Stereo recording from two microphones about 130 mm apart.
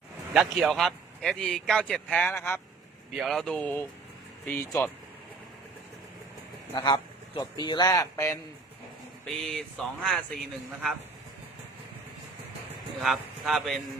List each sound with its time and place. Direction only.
0.3 s a man's voice: centre (ahead or behind)
3.1 s a man's voice: centre (ahead or behind); by 4.9 s 15° left (ahead or behind)
6.7 s speech: 35° left (ahead or behind)
9.2 s a man's voice: 5° left (ahead or behind)
13.0 s a man's voice: centre (ahead or behind)